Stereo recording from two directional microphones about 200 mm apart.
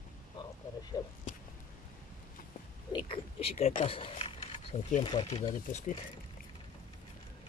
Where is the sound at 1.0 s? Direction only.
20° left (ahead or behind).